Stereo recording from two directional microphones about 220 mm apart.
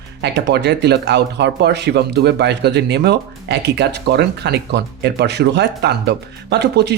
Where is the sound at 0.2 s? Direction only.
50° right (ahead or behind).